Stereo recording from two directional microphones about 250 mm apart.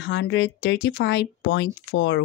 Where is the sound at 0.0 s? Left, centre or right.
Left.